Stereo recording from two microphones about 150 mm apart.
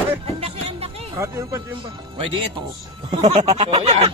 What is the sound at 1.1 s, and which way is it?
Speech, 20° right (ahead or behind).